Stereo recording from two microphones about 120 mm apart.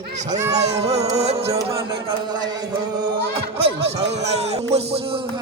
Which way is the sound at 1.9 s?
35° right (ahead or behind).